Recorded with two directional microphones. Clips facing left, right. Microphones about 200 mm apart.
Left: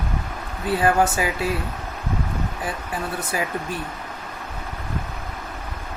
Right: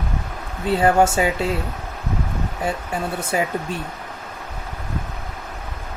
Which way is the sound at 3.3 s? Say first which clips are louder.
Right 5 dB; 25° right (ahead or behind).